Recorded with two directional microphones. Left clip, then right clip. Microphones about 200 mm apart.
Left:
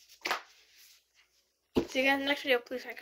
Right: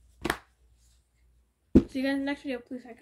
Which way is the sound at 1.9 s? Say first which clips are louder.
Left 3 dB; 15° right (ahead or behind).